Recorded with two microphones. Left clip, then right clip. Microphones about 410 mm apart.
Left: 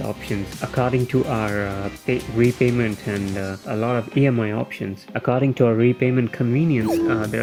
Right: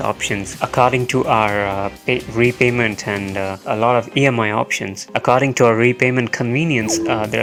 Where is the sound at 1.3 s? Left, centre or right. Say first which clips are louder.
Right 8 dB; right.